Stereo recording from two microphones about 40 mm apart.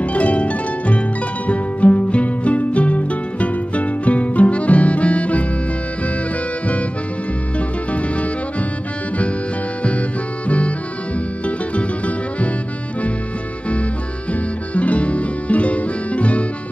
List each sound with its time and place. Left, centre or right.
0.0 s harp: left
1.5 s music: left
7.9 s music: left
11.4 s music: left
14.7 s music: left